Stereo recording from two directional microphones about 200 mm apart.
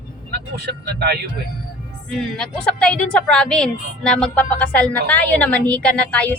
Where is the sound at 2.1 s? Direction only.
5° left (ahead or behind).